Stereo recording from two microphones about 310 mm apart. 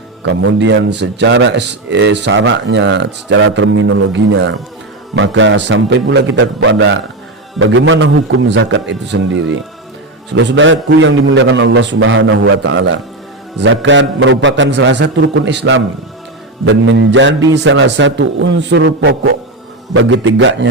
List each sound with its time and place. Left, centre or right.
0.2 s a man's voice: right